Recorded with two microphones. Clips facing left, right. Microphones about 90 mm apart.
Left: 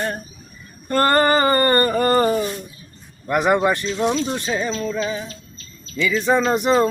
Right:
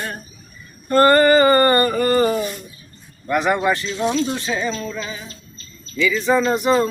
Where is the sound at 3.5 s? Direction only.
25° left (ahead or behind).